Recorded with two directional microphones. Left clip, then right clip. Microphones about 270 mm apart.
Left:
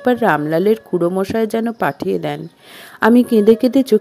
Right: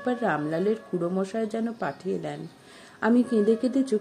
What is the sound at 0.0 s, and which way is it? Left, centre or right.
A woman's voice, left.